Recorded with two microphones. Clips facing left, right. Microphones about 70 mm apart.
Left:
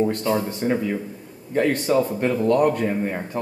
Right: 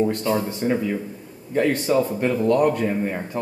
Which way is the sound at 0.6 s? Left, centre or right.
Left.